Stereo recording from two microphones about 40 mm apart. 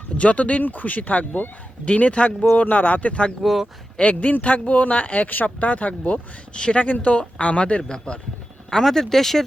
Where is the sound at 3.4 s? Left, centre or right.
Centre.